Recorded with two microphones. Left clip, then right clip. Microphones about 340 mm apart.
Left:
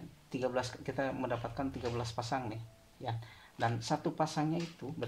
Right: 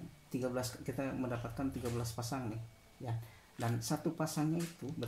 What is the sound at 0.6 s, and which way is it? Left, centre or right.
Speech, left.